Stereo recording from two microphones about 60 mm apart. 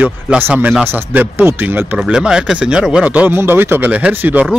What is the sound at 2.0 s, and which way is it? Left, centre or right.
Speech, centre.